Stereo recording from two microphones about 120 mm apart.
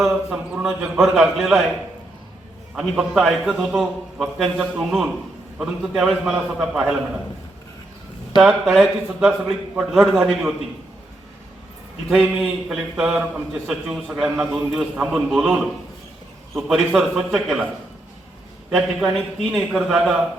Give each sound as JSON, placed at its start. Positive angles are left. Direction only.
{"t": 0.0, "sound": "a man's voice", "side_deg": -5}
{"t": 3.2, "sound": "a man's voice", "side_deg": 0}
{"t": 8.4, "sound": "a man's voice", "side_deg": 0}
{"t": 12.0, "sound": "a man's voice", "side_deg": 0}
{"t": 19.1, "sound": "a man's voice", "side_deg": 0}